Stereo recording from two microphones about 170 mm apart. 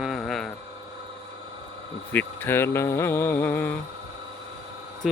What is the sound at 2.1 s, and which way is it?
Speech, 10° left (ahead or behind).